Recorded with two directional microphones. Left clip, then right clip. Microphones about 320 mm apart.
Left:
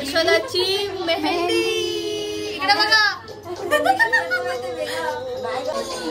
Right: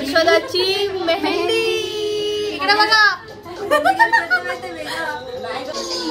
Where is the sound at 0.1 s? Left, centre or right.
Centre.